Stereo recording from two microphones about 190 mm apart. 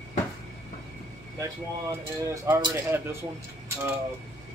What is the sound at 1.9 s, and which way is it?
Speech, 15° right (ahead or behind).